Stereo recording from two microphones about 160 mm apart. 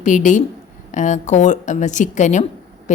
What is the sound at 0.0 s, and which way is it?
A woman's voice, 50° left (ahead or behind).